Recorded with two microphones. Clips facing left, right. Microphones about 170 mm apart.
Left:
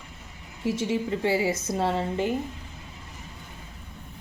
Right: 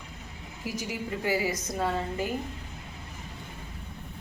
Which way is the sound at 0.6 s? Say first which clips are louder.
Left 8 dB; 25° left (ahead or behind).